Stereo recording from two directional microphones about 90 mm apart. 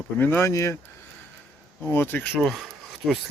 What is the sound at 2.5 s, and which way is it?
Speech, centre (ahead or behind).